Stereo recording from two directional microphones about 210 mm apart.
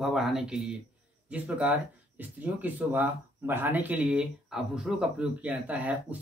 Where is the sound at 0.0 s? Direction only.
Centre (ahead or behind).